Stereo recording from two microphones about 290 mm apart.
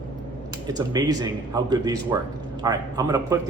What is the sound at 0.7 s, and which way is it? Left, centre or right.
A man's voice, centre.